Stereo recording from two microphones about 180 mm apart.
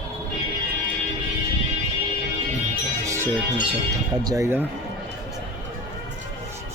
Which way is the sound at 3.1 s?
15° right (ahead or behind).